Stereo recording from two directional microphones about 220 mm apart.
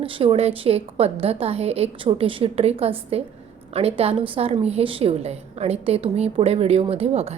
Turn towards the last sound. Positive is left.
turn(degrees=-25)  # may be behind; listen again after turning